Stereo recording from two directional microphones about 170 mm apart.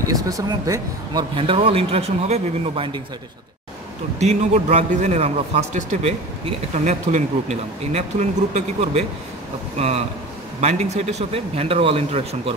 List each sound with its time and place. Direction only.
0.1 s a man's voice: 20° right (ahead or behind)
4.2 s a man's voice: 40° right (ahead or behind)